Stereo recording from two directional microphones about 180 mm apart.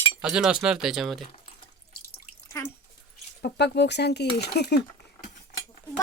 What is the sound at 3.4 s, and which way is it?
Speech, 70° left (ahead or behind).